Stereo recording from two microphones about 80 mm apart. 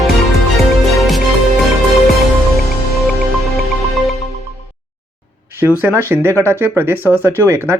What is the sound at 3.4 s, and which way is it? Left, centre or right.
Music, centre.